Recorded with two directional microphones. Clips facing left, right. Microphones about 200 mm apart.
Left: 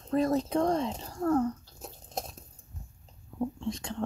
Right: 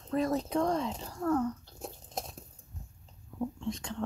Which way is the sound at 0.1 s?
35° left (ahead or behind).